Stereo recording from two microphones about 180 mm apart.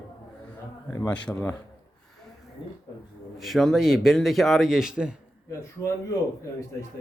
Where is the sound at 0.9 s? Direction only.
15° left (ahead or behind).